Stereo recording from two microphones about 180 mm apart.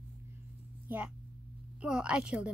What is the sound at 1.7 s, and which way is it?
Speech, 5° right (ahead or behind).